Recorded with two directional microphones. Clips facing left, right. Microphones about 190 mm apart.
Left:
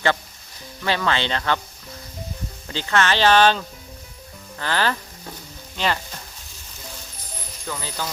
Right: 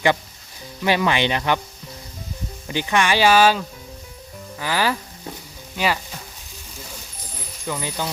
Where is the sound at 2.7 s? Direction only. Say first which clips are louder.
Right 1 dB; 15° right (ahead or behind).